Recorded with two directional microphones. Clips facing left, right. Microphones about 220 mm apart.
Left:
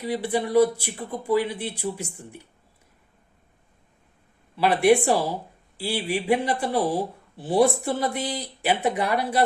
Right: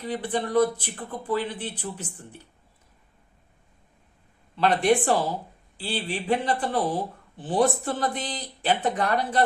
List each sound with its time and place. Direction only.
0.0 s speech: 10° left (ahead or behind)
4.5 s speech: 10° left (ahead or behind)